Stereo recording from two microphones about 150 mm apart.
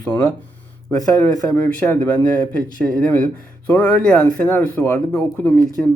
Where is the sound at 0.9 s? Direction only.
20° left (ahead or behind).